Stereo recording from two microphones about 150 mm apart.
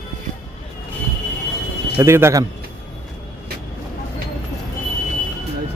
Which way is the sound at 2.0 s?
15° right (ahead or behind).